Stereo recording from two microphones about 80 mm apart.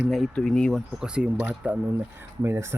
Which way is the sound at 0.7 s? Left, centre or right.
Centre.